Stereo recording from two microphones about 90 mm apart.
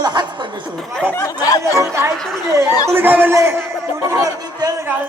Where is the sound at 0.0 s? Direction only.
50° right (ahead or behind).